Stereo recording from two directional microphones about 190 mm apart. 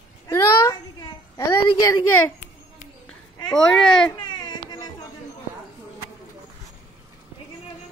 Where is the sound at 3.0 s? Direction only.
Centre (ahead or behind).